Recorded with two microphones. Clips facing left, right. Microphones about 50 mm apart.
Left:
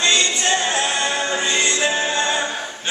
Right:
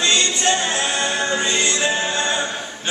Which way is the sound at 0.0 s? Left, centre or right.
Centre.